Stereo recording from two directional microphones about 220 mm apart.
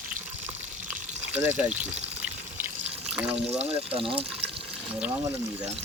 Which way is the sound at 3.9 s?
25° right (ahead or behind).